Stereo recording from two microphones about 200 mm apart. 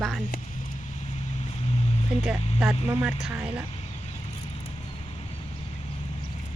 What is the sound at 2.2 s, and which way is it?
Speech, centre (ahead or behind).